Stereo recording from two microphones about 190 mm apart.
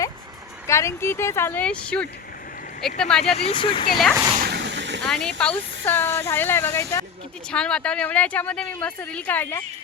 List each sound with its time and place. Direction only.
0.7 s speech: 15° left (ahead or behind)
3.2 s speech: 30° left (ahead or behind)
3.9 s speech: centre (ahead or behind)
4.4 s a sound: 60° right (ahead or behind)
5.0 s speech: 5° left (ahead or behind)